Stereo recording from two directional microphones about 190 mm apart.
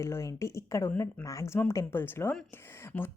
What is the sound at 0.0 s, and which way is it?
A woman's voice, 15° left (ahead or behind).